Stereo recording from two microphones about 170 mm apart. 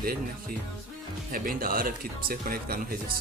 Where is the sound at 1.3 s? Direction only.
55° right (ahead or behind).